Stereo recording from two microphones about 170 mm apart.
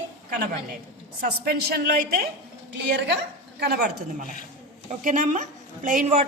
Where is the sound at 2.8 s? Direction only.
80° right.